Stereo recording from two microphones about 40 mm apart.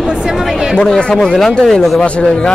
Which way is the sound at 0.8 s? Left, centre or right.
Left.